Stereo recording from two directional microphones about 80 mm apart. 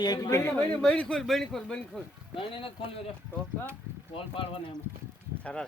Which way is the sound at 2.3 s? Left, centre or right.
Left.